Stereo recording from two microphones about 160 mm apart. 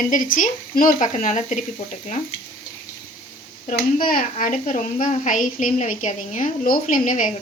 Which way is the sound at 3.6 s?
60° left (ahead or behind).